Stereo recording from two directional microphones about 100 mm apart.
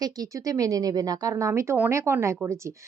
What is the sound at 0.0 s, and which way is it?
Speech, 35° right (ahead or behind).